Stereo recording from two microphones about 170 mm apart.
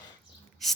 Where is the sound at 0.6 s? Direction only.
Centre (ahead or behind).